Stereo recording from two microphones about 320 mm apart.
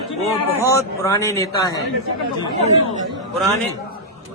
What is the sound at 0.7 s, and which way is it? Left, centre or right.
Speech, centre.